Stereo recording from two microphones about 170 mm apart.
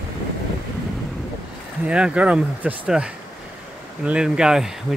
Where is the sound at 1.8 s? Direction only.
5° right (ahead or behind).